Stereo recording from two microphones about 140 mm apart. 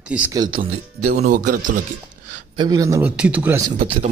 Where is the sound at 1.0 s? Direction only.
75° right (ahead or behind).